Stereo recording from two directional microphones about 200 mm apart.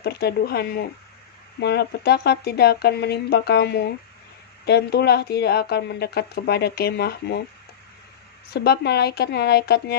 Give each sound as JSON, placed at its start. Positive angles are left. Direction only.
{"t": 0.0, "sound": "a woman's voice", "side_deg": 55}
{"t": 8.5, "sound": "a woman's voice", "side_deg": 55}